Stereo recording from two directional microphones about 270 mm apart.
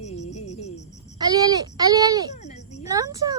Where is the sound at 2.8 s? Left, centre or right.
Centre.